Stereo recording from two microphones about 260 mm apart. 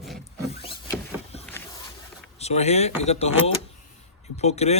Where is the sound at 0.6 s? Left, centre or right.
Centre.